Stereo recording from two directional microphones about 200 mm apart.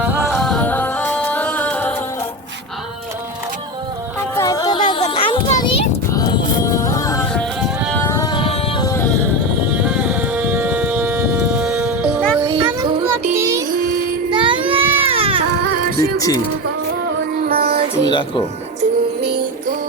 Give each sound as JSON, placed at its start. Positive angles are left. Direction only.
{"t": 0.0, "sound": "music", "side_deg": -10}
{"t": 0.3, "sound": "music", "side_deg": 5}
{"t": 4.4, "sound": "a sound", "side_deg": 15}
{"t": 7.3, "sound": "music", "side_deg": 5}
{"t": 8.0, "sound": "music", "side_deg": 15}
{"t": 9.7, "sound": "civil defense siren", "side_deg": -5}
{"t": 12.5, "sound": "children playing", "side_deg": -20}
{"t": 13.3, "sound": "child singing", "side_deg": -15}
{"t": 14.3, "sound": "baby cry", "side_deg": -25}
{"t": 16.0, "sound": "music", "side_deg": 15}
{"t": 17.4, "sound": "music", "side_deg": -50}
{"t": 18.1, "sound": "speech", "side_deg": 25}